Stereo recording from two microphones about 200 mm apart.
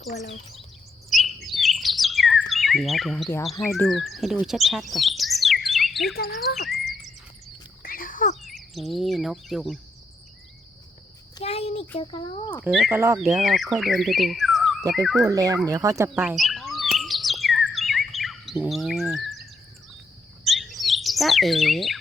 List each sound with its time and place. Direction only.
0.2 s speech: 35° left (ahead or behind)
1.1 s chirp: centre (ahead or behind)
3.8 s speech: centre (ahead or behind)
6.6 s a sound: centre (ahead or behind)
7.8 s a sound: 45° left (ahead or behind)
8.4 s speech: centre (ahead or behind)
11.3 s a sound: 30° left (ahead or behind)
11.9 s speech: 25° left (ahead or behind)
12.6 s speech: 5° right (ahead or behind)
15.3 s speech: 15° right (ahead or behind)
16.3 s bird: centre (ahead or behind)